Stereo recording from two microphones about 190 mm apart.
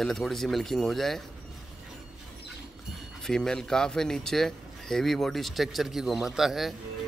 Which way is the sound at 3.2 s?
5° left (ahead or behind).